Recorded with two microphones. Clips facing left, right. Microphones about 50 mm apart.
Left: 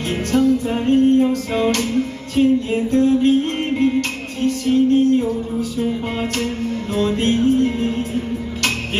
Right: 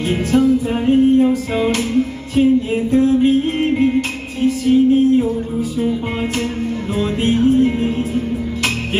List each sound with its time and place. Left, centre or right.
0.1 s music: centre